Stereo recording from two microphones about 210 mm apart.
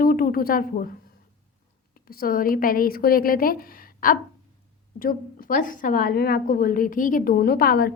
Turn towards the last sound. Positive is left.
turn(degrees=45)  # may be behind; listen again after turning